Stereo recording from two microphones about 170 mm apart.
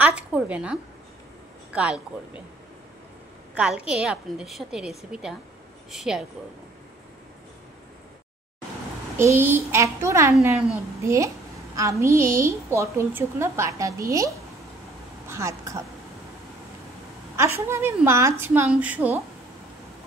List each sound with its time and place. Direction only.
0.0 s a woman's voice: 5° right (ahead or behind)
3.5 s a woman's voice: 5° right (ahead or behind)
9.1 s a woman's voice: 15° right (ahead or behind)
17.4 s a woman's voice: 15° right (ahead or behind)